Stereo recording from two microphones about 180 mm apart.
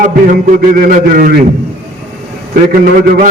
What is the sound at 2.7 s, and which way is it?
Speech, 55° right (ahead or behind).